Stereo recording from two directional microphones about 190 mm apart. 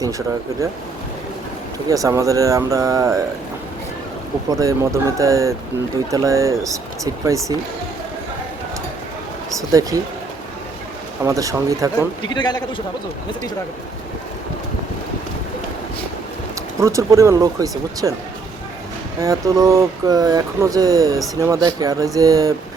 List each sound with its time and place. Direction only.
1.9 s speech: 15° right (ahead or behind)
4.6 s speech: 15° right (ahead or behind)
9.6 s speech: 15° right (ahead or behind)
11.3 s speech: 15° right (ahead or behind)
12.3 s a man's voice: 20° left (ahead or behind)
16.8 s speech: 15° right (ahead or behind)
19.2 s speech: 20° right (ahead or behind)